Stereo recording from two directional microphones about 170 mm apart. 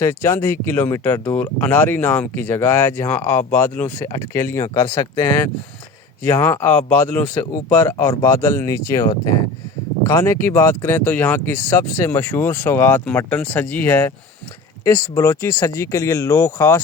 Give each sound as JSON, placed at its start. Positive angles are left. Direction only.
{"t": 0.0, "sound": "speech", "side_deg": 15}